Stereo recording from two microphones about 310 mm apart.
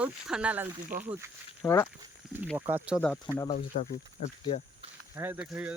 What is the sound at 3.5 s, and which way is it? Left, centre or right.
Speech, left.